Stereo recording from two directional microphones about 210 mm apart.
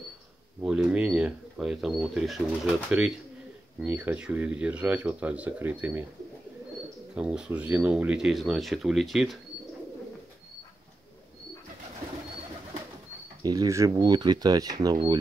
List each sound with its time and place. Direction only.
0.6 s speech: 5° right (ahead or behind)
7.2 s speech: 5° right (ahead or behind)
13.4 s speech: 20° right (ahead or behind)